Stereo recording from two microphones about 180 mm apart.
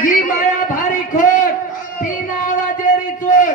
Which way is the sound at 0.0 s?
45° left (ahead or behind).